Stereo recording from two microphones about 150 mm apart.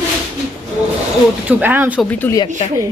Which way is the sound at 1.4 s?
10° right (ahead or behind).